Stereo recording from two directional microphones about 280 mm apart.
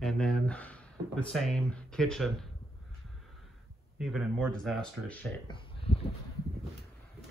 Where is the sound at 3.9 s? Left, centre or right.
Centre.